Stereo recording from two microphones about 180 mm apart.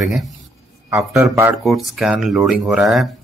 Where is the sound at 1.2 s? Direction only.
15° right (ahead or behind).